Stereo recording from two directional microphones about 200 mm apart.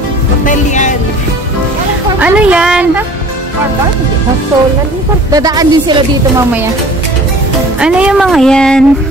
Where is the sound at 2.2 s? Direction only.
5° right (ahead or behind).